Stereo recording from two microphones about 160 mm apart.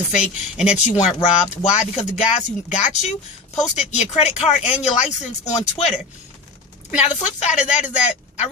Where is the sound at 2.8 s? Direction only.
45° left (ahead or behind).